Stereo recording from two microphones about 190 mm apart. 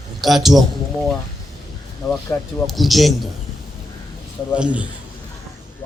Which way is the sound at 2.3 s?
10° left (ahead or behind).